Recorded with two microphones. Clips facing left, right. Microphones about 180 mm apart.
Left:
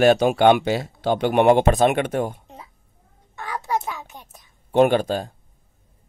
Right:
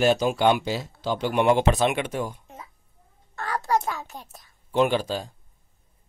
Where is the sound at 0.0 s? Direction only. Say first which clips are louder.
Left 5 dB; 60° left (ahead or behind).